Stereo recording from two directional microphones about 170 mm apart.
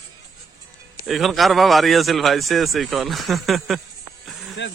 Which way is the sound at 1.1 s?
Centre (ahead or behind).